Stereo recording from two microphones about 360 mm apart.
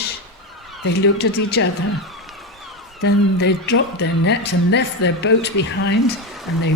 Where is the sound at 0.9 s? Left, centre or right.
Left.